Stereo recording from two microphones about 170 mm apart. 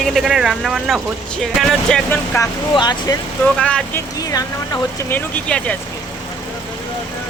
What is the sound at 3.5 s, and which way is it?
Speech, 5° left (ahead or behind).